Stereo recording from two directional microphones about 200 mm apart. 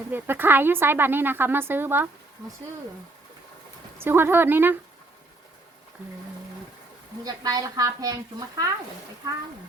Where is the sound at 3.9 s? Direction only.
10° right (ahead or behind).